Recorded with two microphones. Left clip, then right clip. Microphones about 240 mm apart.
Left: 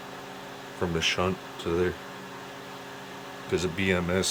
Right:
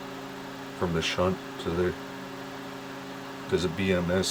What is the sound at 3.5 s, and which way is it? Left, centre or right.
Speech, centre.